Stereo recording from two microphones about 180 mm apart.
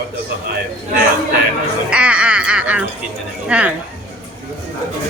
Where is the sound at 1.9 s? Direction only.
5° right (ahead or behind).